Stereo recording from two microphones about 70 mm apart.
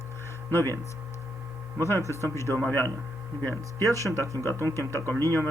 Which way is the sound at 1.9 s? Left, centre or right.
Left.